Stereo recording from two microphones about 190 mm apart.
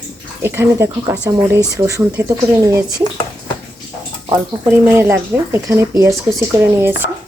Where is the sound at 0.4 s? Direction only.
10° right (ahead or behind).